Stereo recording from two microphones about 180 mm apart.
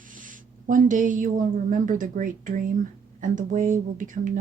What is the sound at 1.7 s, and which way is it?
Speech, 45° right (ahead or behind).